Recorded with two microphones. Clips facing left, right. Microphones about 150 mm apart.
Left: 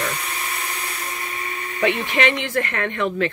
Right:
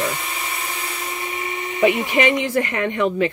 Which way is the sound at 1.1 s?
20° right (ahead or behind).